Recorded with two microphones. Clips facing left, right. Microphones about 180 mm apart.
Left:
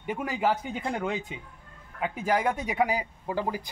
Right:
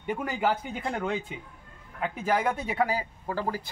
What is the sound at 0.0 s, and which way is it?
Speech, 5° left (ahead or behind).